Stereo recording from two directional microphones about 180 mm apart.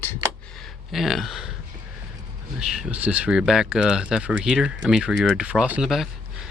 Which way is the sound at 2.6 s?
5° right (ahead or behind).